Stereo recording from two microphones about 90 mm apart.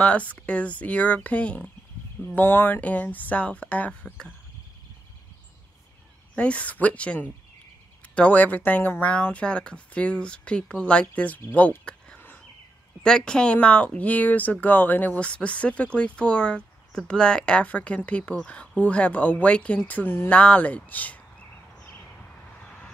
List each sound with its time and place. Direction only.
0.0 s speech: 15° left (ahead or behind)
6.3 s speech: 15° left (ahead or behind)